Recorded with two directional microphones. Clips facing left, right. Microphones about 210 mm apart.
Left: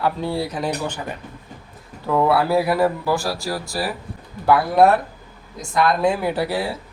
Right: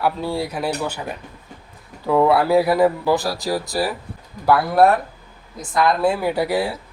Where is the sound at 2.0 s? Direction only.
10° right (ahead or behind).